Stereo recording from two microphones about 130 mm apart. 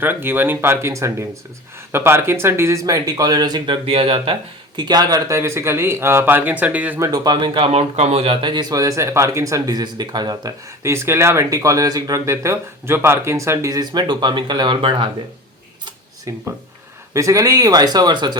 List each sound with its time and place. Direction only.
0.0 s speech: 15° right (ahead or behind); by 3.8 s 30° right (ahead or behind)
3.8 s speech: 45° right (ahead or behind)
4.8 s speech: 30° right (ahead or behind); by 7.0 s 10° right (ahead or behind)
7.0 s speech: 30° right (ahead or behind)
7.7 s speech: 55° right (ahead or behind)
16.3 s speech: 25° right (ahead or behind)